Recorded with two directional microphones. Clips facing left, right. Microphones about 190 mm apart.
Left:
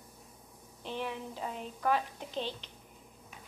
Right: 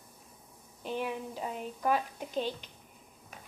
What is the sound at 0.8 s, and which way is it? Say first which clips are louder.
A woman's voice: right 3 dB; 10° right (ahead or behind).